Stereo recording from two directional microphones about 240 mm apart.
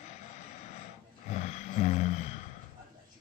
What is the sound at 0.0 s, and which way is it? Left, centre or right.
Vehicle, left.